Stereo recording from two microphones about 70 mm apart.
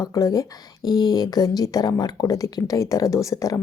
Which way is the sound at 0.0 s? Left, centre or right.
Left.